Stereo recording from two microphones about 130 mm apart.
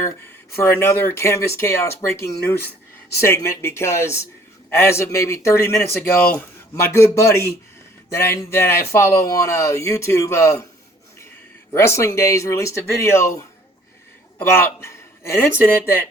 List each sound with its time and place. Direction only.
0.5 s speech: 20° left (ahead or behind)
11.7 s speech: 20° left (ahead or behind)
14.3 s speech: 20° left (ahead or behind)